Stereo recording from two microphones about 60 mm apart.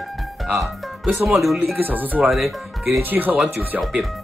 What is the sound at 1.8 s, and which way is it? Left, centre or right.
Speech, right.